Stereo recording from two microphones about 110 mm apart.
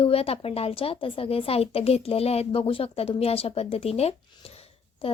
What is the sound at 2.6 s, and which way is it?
A woman's voice, 55° left (ahead or behind).